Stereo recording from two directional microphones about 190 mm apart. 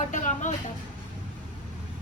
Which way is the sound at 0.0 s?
40° left (ahead or behind).